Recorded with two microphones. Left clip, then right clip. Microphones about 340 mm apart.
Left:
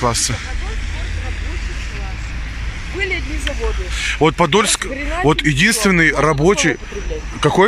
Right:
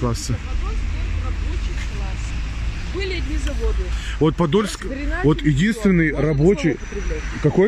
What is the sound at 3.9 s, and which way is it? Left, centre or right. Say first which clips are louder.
Speech: left 6 dB; centre.